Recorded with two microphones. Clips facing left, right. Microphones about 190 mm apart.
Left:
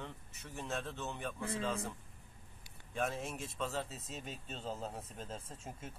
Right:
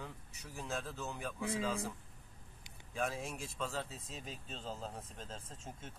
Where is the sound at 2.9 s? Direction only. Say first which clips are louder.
Left 1 dB; centre (ahead or behind).